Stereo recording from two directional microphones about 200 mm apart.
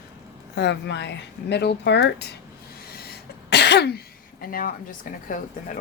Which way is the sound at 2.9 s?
55° left (ahead or behind).